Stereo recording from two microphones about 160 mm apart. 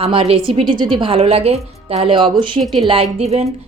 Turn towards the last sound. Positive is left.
turn(degrees=-40)  # may be behind; listen again after turning